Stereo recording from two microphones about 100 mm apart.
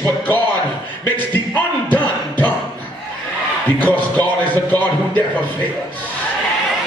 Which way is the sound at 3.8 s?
15° left (ahead or behind).